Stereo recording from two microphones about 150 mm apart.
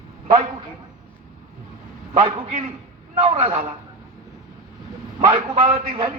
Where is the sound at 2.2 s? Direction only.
50° right (ahead or behind).